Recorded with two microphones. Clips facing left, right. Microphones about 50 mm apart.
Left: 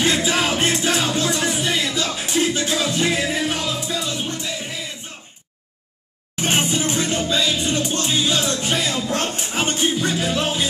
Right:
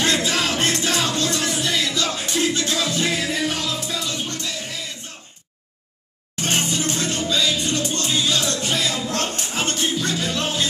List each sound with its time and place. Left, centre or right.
0.0 s music: centre
6.3 s music: centre